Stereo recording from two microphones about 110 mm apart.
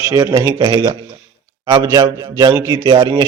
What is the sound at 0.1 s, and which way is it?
A man's voice, 35° right (ahead or behind).